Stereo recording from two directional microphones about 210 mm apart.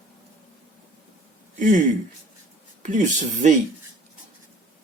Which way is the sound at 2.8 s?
35° right (ahead or behind).